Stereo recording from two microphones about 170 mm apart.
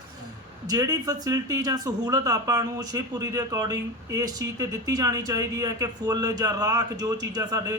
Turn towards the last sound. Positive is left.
turn(degrees=-20)  # may be behind; listen again after turning